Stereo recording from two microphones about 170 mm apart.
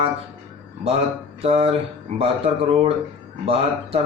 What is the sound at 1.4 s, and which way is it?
A man's voice, 35° right (ahead or behind).